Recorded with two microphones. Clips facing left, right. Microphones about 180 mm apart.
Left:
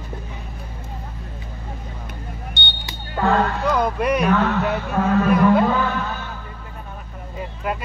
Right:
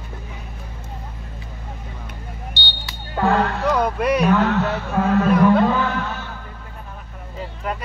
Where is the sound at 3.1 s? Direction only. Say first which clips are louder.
Even; 5° right (ahead or behind).